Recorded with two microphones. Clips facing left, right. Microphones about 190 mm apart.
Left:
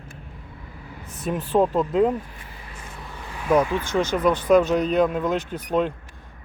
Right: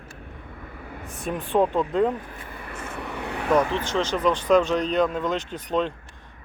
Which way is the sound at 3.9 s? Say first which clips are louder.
Left 3 dB; 10° left (ahead or behind).